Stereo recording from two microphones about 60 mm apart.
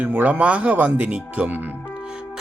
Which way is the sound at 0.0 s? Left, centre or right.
Right.